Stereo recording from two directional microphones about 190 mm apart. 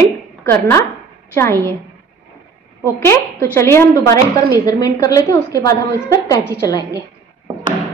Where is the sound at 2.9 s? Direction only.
15° left (ahead or behind).